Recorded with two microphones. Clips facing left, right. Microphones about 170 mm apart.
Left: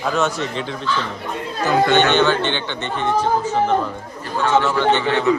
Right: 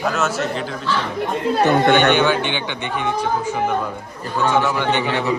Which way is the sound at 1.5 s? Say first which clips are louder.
Right 1 dB; 70° right (ahead or behind).